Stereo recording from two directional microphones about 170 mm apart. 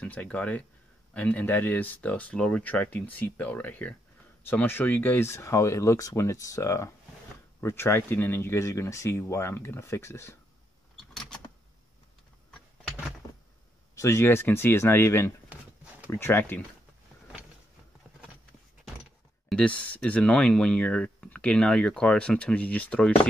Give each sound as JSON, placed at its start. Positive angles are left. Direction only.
{"t": 0.0, "sound": "speech", "side_deg": 10}
{"t": 11.1, "sound": "a sound", "side_deg": 5}
{"t": 13.9, "sound": "speech", "side_deg": 15}
{"t": 15.5, "sound": "a sound", "side_deg": -10}
{"t": 16.1, "sound": "speech", "side_deg": 15}
{"t": 19.5, "sound": "speech", "side_deg": 10}